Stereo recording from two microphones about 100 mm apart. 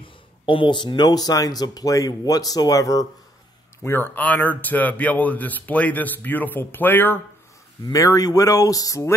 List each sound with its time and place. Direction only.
0.0 s speech: 60° left (ahead or behind); by 3.1 s 35° left (ahead or behind)
3.8 s speech: 20° left (ahead or behind)
7.8 s speech: 35° left (ahead or behind)